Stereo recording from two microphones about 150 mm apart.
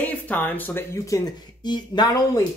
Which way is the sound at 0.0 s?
10° left (ahead or behind).